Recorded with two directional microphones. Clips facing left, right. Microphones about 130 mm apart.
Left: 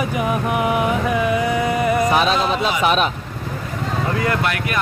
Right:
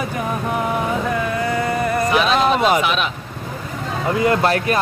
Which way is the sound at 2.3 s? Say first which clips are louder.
Right 4 dB; 50° right (ahead or behind).